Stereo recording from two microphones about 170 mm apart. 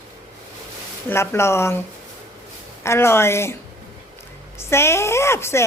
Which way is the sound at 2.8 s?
15° left (ahead or behind).